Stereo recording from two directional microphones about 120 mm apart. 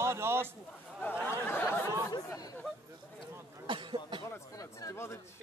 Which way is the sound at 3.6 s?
40° right (ahead or behind).